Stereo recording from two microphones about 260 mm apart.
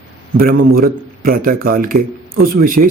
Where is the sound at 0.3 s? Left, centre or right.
Right.